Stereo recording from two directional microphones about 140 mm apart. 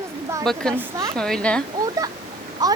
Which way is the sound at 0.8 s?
25° right (ahead or behind).